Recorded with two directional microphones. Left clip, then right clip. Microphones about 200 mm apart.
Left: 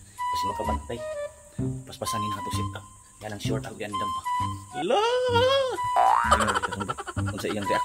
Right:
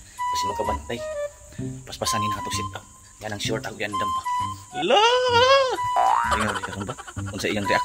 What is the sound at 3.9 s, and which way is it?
Speech, 5° right (ahead or behind).